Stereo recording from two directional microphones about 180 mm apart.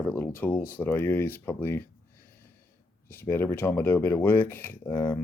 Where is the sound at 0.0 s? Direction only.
10° left (ahead or behind).